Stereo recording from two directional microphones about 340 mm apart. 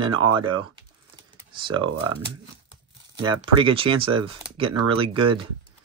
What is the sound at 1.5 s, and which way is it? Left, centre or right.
Speech, centre.